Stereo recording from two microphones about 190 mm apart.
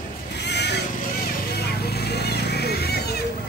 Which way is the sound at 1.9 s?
60° left (ahead or behind).